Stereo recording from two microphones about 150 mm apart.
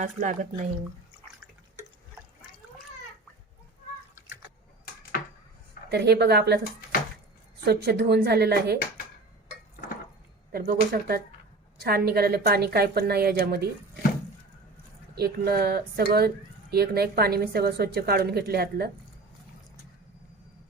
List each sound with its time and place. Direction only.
0.0 s speech: 55° right (ahead or behind)
5.1 s a sound: 70° left (ahead or behind)
5.9 s speech: 90° right
7.6 s speech: 90° right
10.5 s speech: 90° right
15.1 s speech: 90° right